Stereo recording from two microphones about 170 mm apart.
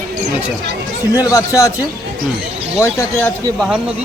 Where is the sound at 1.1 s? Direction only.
20° left (ahead or behind).